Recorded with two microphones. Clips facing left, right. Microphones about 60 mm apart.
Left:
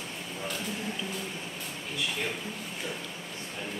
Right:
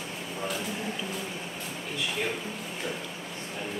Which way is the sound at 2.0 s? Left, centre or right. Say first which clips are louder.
Right 2 dB; centre.